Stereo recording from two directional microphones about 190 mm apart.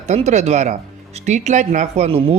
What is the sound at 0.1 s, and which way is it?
Speech, 40° right (ahead or behind).